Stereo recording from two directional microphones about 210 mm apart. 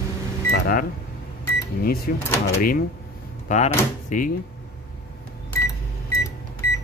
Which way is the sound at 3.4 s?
35° left (ahead or behind).